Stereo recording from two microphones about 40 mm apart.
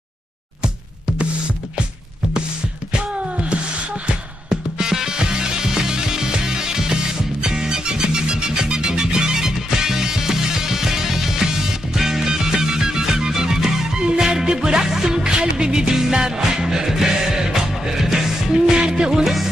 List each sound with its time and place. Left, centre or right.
4.0 s music: right